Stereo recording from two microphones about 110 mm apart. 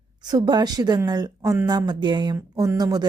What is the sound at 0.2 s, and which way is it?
Speech, 40° right (ahead or behind).